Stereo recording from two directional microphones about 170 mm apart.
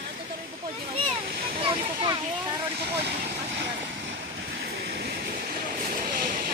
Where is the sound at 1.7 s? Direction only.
30° right (ahead or behind).